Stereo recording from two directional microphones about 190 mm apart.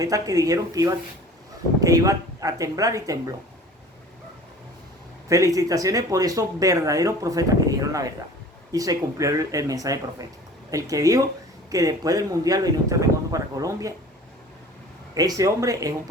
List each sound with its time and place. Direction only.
0.0 s speech: 20° right (ahead or behind)
5.3 s speech: 15° right (ahead or behind)
15.1 s speech: 20° right (ahead or behind)